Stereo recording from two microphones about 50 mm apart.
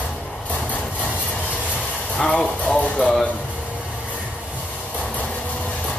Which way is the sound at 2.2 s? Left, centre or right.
Left.